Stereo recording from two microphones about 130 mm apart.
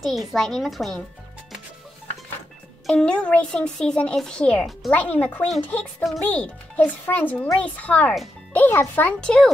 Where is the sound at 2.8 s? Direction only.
5° left (ahead or behind).